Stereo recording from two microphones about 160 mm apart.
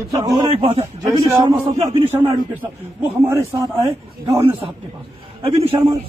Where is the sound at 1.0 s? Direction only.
20° right (ahead or behind).